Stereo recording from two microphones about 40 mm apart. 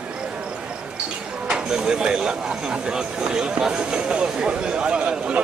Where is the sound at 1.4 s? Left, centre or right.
Centre.